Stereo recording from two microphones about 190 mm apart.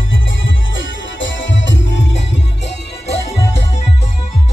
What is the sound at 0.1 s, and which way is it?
Music, 80° left.